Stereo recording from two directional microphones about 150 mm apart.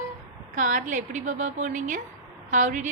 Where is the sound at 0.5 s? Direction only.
60° right (ahead or behind).